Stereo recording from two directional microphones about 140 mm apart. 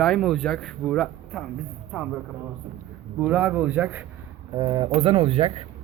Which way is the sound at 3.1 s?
10° right (ahead or behind).